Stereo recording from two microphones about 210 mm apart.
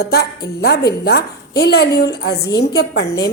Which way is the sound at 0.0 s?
50° left (ahead or behind).